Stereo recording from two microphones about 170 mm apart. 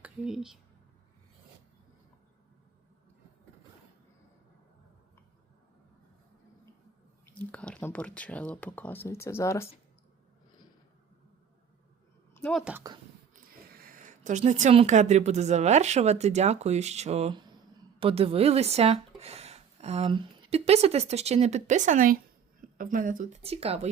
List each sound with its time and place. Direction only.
0.0 s speech: 5° right (ahead or behind)
7.3 s speech: 10° left (ahead or behind)
12.3 s a sound: 5° left (ahead or behind)
12.9 s speech: 20° right (ahead or behind)
13.7 s speech: 55° right (ahead or behind); by 23.9 s 35° right (ahead or behind)